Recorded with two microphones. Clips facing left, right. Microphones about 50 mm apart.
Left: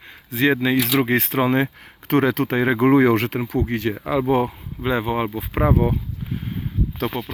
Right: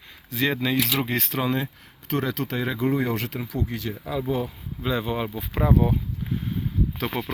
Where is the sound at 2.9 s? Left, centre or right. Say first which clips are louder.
Left 12 dB; left.